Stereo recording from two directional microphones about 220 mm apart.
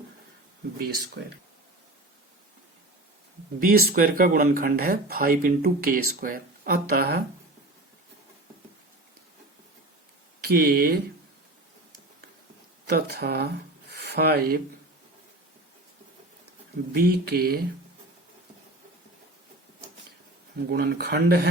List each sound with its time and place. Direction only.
0.8 s speech: 45° right (ahead or behind)
3.6 s speech: 45° right (ahead or behind)
10.4 s speech: 45° right (ahead or behind)
12.9 s speech: 45° right (ahead or behind)
16.9 s speech: 45° right (ahead or behind)
20.7 s speech: 45° right (ahead or behind)